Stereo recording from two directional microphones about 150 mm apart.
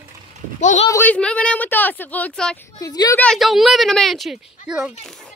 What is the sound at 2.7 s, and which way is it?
Speech, 25° left (ahead or behind).